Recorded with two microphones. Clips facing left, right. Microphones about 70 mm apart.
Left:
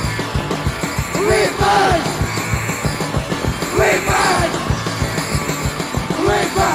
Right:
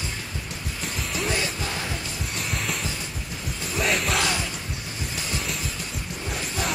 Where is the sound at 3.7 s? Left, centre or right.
Left.